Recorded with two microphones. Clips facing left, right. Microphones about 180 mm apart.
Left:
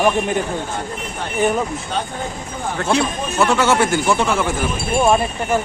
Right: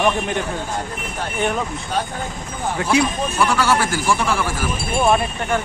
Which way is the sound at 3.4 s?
25° left (ahead or behind).